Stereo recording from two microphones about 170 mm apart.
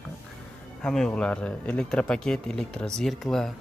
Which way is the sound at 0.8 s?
5° left (ahead or behind).